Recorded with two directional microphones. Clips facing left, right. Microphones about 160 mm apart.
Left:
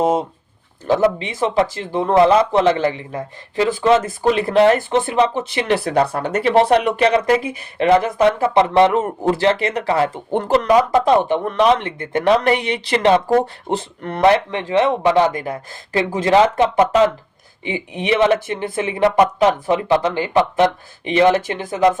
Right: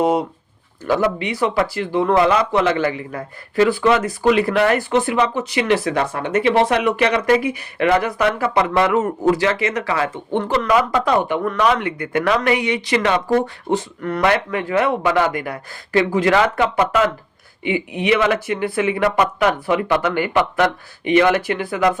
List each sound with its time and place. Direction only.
0.9 s speech: 25° left (ahead or behind)
4.0 s speech: 40° left (ahead or behind); by 21.9 s 20° left (ahead or behind)